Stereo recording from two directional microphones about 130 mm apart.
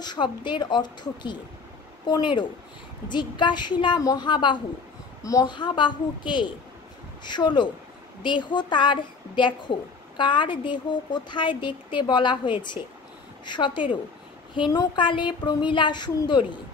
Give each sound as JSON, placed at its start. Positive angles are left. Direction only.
{"t": 0.0, "sound": "a woman's voice", "side_deg": 35}